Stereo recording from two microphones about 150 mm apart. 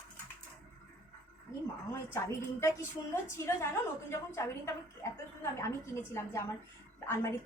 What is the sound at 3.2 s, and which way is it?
A woman's voice, 20° left (ahead or behind).